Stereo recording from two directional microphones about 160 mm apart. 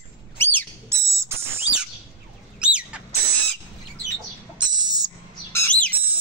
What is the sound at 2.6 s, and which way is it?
Bird, 5° right (ahead or behind).